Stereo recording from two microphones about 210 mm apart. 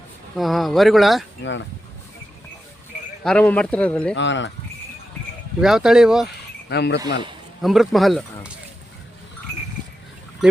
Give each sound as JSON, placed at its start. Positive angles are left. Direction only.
{"t": 0.3, "sound": "speech", "side_deg": 0}
{"t": 1.4, "sound": "speech", "side_deg": 60}
{"t": 3.2, "sound": "speech", "side_deg": 5}
{"t": 4.1, "sound": "speech", "side_deg": 60}
{"t": 5.5, "sound": "speech", "side_deg": -5}
{"t": 6.7, "sound": "speech", "side_deg": 55}
{"t": 7.6, "sound": "speech", "side_deg": 0}